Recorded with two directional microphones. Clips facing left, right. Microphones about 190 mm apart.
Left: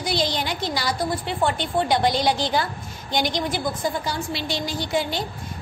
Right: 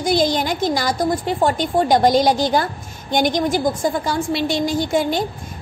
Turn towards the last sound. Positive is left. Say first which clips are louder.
# right 6 dB
turn(degrees=-50)  # may be behind; listen again after turning